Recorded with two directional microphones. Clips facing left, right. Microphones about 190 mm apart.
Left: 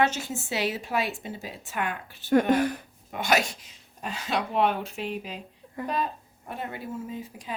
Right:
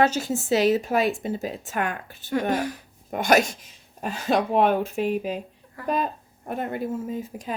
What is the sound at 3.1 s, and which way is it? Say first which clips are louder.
Speech: right 5 dB; 45° right (ahead or behind).